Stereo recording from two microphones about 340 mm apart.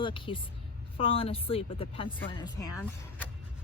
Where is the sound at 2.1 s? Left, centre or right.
Centre.